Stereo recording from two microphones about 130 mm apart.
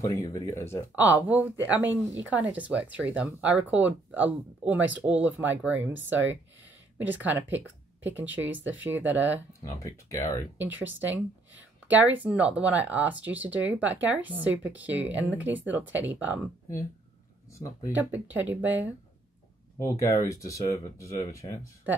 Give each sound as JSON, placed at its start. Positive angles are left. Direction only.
{"t": 0.0, "sound": "speech", "side_deg": 25}
{"t": 0.9, "sound": "speech", "side_deg": -15}
{"t": 9.6, "sound": "speech", "side_deg": 25}
{"t": 10.6, "sound": "speech", "side_deg": -15}
{"t": 17.5, "sound": "speech", "side_deg": 20}
{"t": 17.9, "sound": "speech", "side_deg": -15}
{"t": 19.8, "sound": "speech", "side_deg": 25}